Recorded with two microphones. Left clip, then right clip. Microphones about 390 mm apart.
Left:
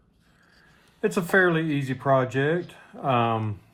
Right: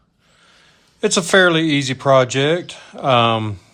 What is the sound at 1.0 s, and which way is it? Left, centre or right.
Speech, right.